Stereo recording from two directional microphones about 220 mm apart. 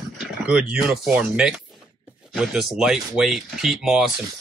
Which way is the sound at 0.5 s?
5° right (ahead or behind).